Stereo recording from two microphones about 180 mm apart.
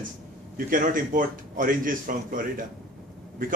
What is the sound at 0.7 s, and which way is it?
Speech, 50° right (ahead or behind).